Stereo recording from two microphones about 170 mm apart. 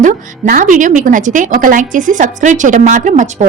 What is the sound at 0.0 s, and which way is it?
A woman's voice, 50° right (ahead or behind).